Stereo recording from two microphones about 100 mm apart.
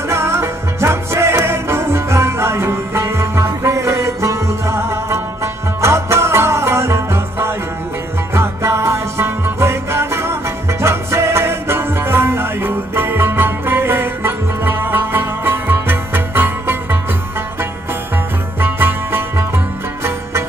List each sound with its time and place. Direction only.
0.1 s music: 25° right (ahead or behind)
18.6 s music: 20° right (ahead or behind)